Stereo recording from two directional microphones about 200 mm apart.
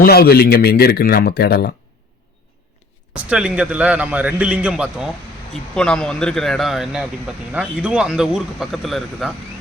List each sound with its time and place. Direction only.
0.0 s a man's voice: 50° left (ahead or behind)
3.2 s a man's voice: 5° right (ahead or behind)